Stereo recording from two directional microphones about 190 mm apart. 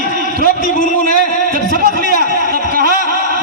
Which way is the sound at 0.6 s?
40° left (ahead or behind).